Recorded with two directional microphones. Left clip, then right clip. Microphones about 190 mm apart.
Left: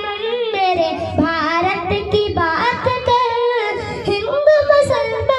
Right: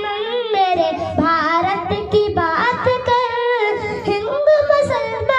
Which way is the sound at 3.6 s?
35° left (ahead or behind).